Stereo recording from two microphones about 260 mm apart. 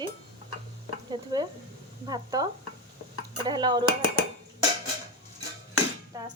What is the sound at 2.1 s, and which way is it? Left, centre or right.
Speech, centre.